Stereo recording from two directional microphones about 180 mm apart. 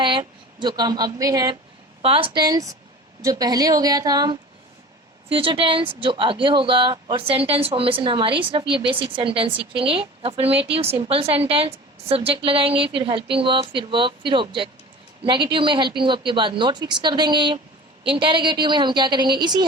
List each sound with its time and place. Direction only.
0.0 s speech: 25° right (ahead or behind)
2.0 s a woman's voice: 30° right (ahead or behind)